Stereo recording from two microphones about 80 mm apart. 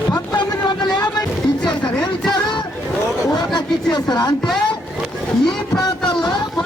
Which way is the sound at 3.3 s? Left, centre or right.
Left.